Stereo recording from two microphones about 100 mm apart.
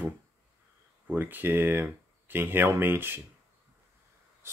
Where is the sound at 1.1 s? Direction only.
20° right (ahead or behind).